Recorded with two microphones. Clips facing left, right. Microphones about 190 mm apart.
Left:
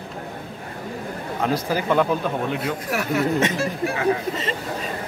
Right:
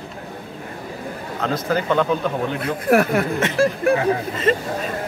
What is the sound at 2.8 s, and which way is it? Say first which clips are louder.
Speech: right 9 dB; 55° right (ahead or behind).